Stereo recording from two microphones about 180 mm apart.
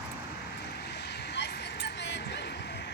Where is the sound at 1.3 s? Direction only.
75° left (ahead or behind).